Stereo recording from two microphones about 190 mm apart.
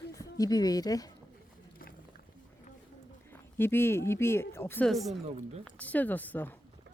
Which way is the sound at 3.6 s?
10° left (ahead or behind).